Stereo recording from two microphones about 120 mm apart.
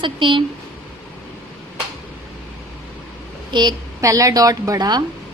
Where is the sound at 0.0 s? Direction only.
45° right (ahead or behind).